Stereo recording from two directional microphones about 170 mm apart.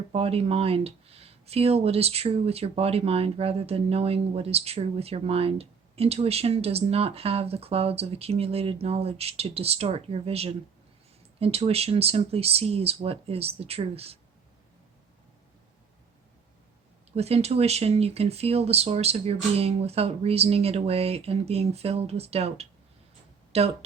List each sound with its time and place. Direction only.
0.1 s speech: 35° right (ahead or behind)
17.1 s speech: 35° right (ahead or behind)